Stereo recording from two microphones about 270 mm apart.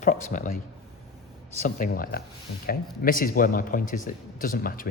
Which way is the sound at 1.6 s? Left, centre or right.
Left.